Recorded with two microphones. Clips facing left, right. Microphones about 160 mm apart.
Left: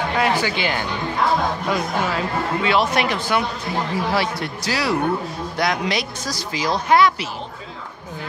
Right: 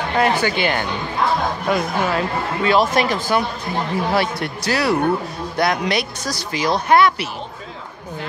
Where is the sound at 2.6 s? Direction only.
40° right (ahead or behind).